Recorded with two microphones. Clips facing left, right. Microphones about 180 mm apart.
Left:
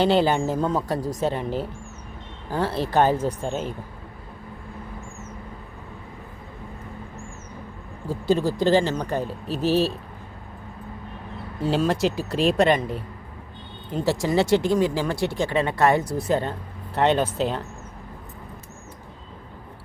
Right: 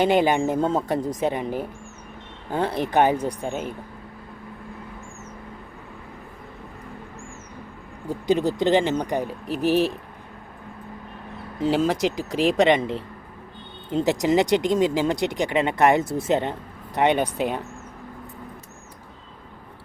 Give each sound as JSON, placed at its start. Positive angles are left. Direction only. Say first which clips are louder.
{"t": 0.0, "sound": "speech", "louder": "right 1 dB", "side_deg": -15}
{"t": 8.3, "sound": "speech", "louder": "even", "side_deg": -20}
{"t": 11.6, "sound": "speech", "louder": "right 1 dB", "side_deg": -15}